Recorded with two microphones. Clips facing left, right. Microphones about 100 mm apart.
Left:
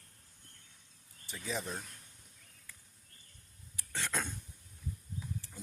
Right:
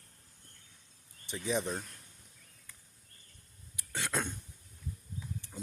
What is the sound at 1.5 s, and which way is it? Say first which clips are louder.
Speech: right 6 dB; 20° right (ahead or behind).